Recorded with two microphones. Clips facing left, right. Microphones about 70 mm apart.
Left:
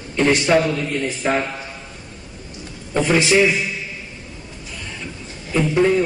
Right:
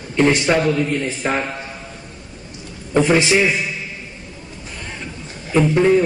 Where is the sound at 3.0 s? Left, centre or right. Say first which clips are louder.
Left 1 dB; centre.